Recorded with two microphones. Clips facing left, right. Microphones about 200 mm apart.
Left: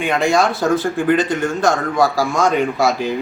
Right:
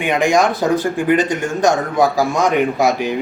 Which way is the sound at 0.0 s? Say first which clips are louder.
Right 1 dB; 15° right (ahead or behind).